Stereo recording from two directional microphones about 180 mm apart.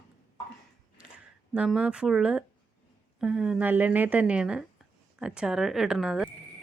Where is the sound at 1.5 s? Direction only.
5° right (ahead or behind).